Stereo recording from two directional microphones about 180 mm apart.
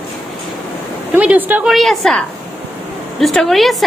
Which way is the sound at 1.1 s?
10° right (ahead or behind).